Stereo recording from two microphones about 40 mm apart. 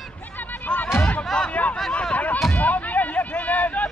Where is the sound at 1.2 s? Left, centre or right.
Centre.